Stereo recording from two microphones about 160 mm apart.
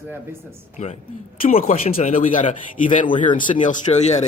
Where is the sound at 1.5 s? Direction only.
60° left (ahead or behind).